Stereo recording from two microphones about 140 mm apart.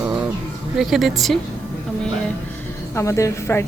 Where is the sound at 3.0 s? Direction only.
20° left (ahead or behind).